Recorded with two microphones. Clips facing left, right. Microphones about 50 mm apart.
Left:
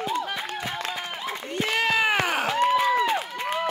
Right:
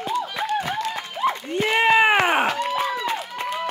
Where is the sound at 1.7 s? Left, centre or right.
Right.